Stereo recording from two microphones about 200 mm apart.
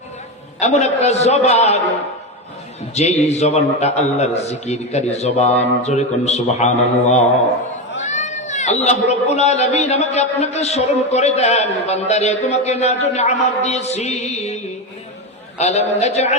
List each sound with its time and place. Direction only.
0.6 s a man's voice: 35° left (ahead or behind)
2.9 s a man's voice: 35° left (ahead or behind)
8.0 s a man's voice: 35° left (ahead or behind)